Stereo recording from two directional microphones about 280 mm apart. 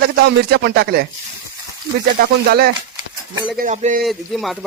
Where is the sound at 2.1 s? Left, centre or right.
Right.